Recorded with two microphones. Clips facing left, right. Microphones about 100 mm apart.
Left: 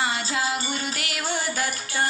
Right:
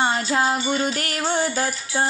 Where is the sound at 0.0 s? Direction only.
40° right (ahead or behind).